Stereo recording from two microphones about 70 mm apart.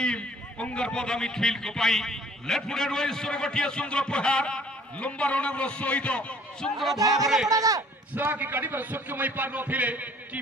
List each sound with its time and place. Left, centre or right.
0.0 s a man's voice: centre
6.7 s speech: centre
7.0 s speech: right
7.3 s speech: centre
7.5 s speech: right
8.1 s a man's voice: right